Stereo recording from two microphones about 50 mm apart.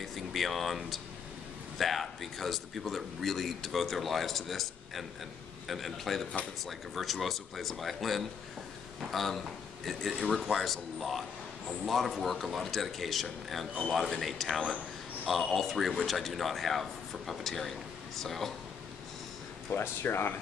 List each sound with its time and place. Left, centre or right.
0.0 s speech: centre
19.7 s speech: left